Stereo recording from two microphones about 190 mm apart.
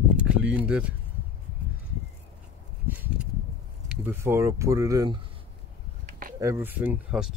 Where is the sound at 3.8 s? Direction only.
10° right (ahead or behind).